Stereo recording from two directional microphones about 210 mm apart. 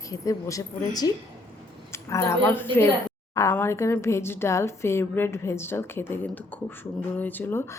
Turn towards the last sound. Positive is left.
turn(degrees=10)  # may be behind; listen again after turning